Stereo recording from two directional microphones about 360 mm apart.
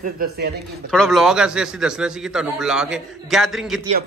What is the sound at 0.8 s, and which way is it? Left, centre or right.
A man's voice, centre.